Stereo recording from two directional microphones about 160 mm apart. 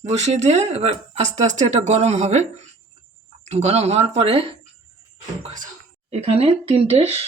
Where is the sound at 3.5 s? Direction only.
40° right (ahead or behind).